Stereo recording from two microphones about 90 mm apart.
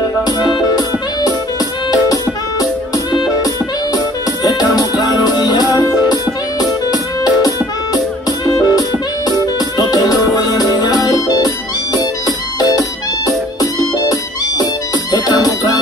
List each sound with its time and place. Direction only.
0.2 s music: 55° left (ahead or behind)
2.6 s music: 50° left (ahead or behind)